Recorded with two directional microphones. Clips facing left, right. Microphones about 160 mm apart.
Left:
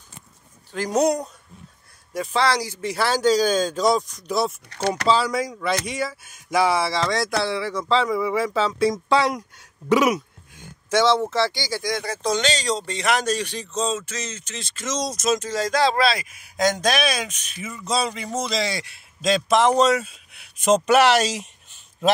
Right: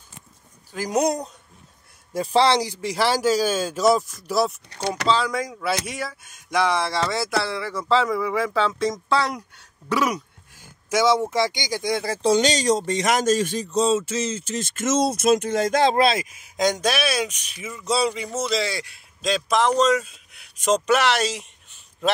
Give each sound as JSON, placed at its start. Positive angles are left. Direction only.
{"t": 0.7, "sound": "speech", "side_deg": -10}
{"t": 2.1, "sound": "speech", "side_deg": -30}
{"t": 9.8, "sound": "speech", "side_deg": 15}
{"t": 10.9, "sound": "speech", "side_deg": -10}
{"t": 11.9, "sound": "speech", "side_deg": -30}
{"t": 12.4, "sound": "speech", "side_deg": -15}
{"t": 12.7, "sound": "speech", "side_deg": -45}
{"t": 13.9, "sound": "music", "side_deg": -30}
{"t": 14.6, "sound": "speech", "side_deg": -50}
{"t": 15.8, "sound": "speech", "side_deg": -20}
{"t": 19.6, "sound": "speech", "side_deg": 10}